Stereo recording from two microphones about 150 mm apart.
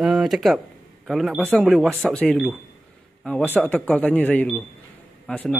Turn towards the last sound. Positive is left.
turn(degrees=10)  # may be behind; listen again after turning